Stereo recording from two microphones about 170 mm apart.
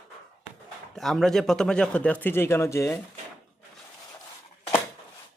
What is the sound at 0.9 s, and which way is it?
A man's voice, centre (ahead or behind).